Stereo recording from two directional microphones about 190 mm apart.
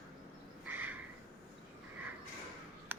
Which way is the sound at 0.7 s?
10° right (ahead or behind).